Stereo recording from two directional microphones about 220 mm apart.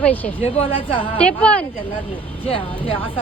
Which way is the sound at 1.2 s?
5° left (ahead or behind).